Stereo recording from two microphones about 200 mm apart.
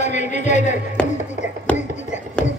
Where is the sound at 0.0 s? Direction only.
35° left (ahead or behind).